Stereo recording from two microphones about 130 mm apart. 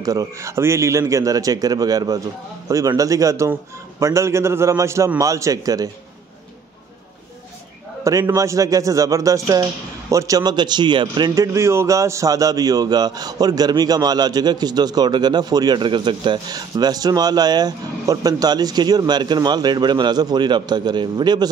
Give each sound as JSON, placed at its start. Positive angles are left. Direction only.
{"t": 0.0, "sound": "a man's voice", "side_deg": -25}
{"t": 8.0, "sound": "speech", "side_deg": -25}